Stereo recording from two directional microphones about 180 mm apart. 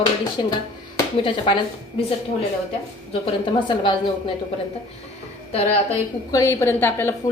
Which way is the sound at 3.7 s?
25° left (ahead or behind).